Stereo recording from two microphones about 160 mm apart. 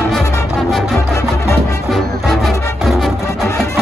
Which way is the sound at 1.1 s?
20° left (ahead or behind).